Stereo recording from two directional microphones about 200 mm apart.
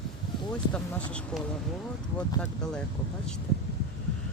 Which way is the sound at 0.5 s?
5° left (ahead or behind).